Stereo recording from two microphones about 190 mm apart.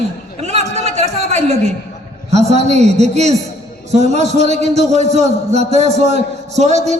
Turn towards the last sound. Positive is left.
turn(degrees=-35)  # may be behind; listen again after turning